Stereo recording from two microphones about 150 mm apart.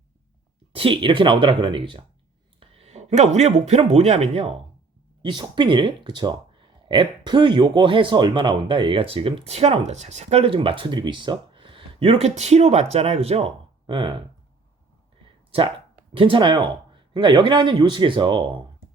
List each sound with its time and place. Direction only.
0.7 s speech: 35° right (ahead or behind)
5.2 s speech: 30° right (ahead or behind)
16.1 s speech: 35° right (ahead or behind)